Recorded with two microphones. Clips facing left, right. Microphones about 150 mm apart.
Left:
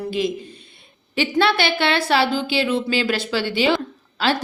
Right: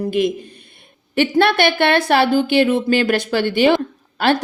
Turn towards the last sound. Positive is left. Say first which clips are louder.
# right 4 dB
turn(degrees=-55)  # may be behind; listen again after turning